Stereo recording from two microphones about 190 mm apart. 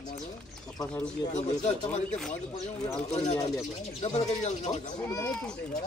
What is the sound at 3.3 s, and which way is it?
Speech, 20° left (ahead or behind).